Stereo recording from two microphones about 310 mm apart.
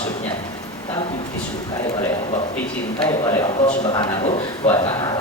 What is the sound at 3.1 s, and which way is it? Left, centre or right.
Speech, centre.